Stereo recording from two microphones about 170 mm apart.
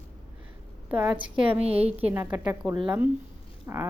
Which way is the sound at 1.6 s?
35° right (ahead or behind).